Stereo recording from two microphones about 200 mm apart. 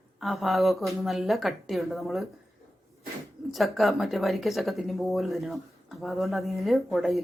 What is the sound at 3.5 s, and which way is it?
Speech, centre (ahead or behind).